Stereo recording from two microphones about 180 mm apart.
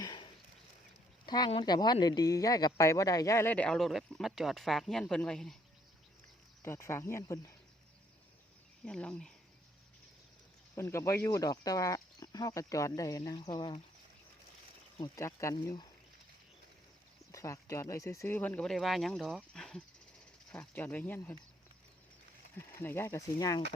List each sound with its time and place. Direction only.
0.0 s horse: 25° left (ahead or behind)
1.3 s speech: 25° left (ahead or behind); by 5.5 s 5° left (ahead or behind)
6.6 s speech: 15° left (ahead or behind)
8.8 s speech: 5° left (ahead or behind)
10.8 s speech: 15° left (ahead or behind)
14.9 s speech: 20° left (ahead or behind)
17.3 s speech: 15° left (ahead or behind)
22.5 s speech: 15° left (ahead or behind)